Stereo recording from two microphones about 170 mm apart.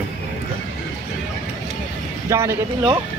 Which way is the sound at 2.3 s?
15° right (ahead or behind).